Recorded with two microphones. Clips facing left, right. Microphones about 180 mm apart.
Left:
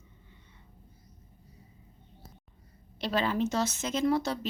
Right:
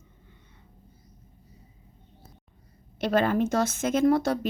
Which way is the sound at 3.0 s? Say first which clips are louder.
Right 5 dB; 50° right (ahead or behind).